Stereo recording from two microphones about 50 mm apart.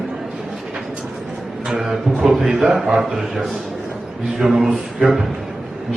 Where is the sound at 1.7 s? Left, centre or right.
Centre.